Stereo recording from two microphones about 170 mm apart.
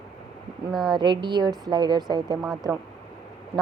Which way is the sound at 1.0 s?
25° right (ahead or behind).